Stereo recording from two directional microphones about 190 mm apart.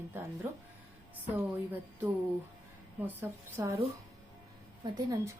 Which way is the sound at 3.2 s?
15° right (ahead or behind).